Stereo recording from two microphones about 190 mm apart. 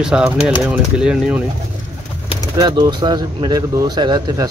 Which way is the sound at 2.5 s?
20° right (ahead or behind).